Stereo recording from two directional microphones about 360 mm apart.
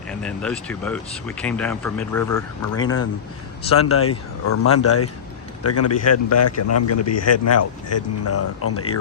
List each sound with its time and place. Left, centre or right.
0.1 s speech: centre
2.8 s speech: left
4.4 s a man's voice: left